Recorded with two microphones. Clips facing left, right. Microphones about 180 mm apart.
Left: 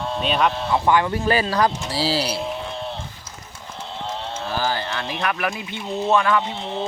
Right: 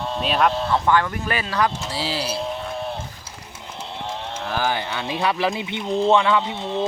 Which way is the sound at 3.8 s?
15° right (ahead or behind).